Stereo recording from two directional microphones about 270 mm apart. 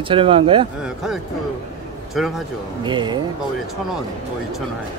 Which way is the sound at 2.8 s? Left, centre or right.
Centre.